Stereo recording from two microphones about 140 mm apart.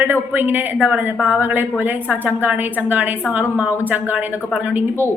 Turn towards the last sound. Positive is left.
turn(degrees=-10)  # may be behind; listen again after turning